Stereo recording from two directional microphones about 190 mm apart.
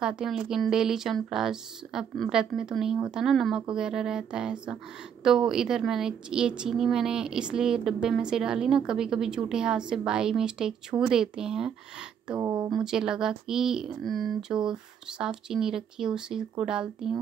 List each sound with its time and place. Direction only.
0.0 s a woman's voice: 5° right (ahead or behind)
12.4 s speech: 20° right (ahead or behind)
12.7 s a woman's voice: 5° right (ahead or behind)